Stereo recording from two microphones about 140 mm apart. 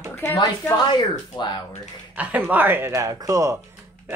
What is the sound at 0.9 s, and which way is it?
Speech, 30° left (ahead or behind).